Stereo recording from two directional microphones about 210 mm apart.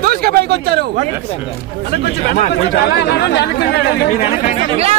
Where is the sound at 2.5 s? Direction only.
50° left (ahead or behind).